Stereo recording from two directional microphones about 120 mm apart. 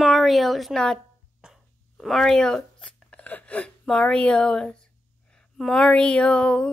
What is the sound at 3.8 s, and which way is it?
Speech, 5° left (ahead or behind).